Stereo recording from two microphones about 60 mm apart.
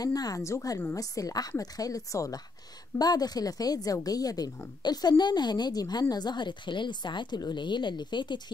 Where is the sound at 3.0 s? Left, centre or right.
Left.